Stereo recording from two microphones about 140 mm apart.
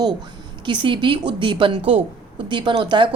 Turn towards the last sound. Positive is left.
turn(degrees=-35)  # may be behind; listen again after turning